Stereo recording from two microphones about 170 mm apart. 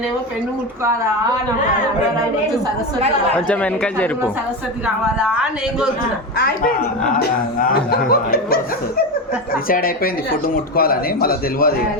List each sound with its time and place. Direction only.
3.3 s a man's voice: 10° left (ahead or behind)
5.2 s a man's voice: 5° right (ahead or behind)
6.3 s speech: 60° left (ahead or behind)
9.6 s speech: 60° left (ahead or behind)